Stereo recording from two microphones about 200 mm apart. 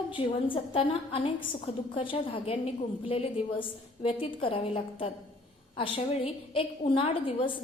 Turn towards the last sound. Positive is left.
turn(degrees=25)  # may be behind; listen again after turning